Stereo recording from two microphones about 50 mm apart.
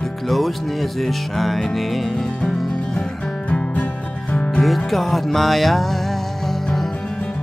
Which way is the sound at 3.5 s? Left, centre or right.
Left.